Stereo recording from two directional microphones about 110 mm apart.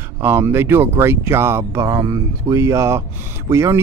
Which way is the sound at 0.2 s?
25° right (ahead or behind).